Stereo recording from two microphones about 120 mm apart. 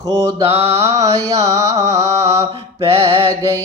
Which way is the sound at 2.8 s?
50° right (ahead or behind).